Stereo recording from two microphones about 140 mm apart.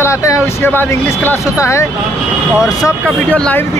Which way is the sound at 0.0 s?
20° left (ahead or behind).